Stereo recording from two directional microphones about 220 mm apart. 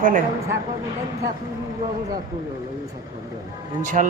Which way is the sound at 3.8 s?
35° right (ahead or behind).